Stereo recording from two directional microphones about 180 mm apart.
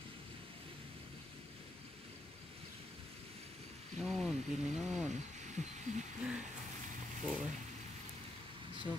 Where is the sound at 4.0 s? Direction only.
Centre (ahead or behind).